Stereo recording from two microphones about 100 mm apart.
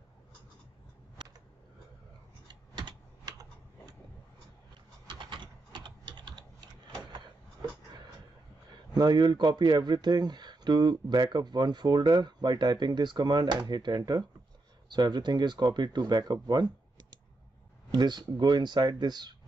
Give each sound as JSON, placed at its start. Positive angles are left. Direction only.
{"t": 1.2, "sound": "a sound", "side_deg": -50}
{"t": 2.4, "sound": "typing", "side_deg": -50}
{"t": 5.0, "sound": "typing", "side_deg": -55}
{"t": 8.9, "sound": "speech", "side_deg": -45}
{"t": 17.9, "sound": "speech", "side_deg": -45}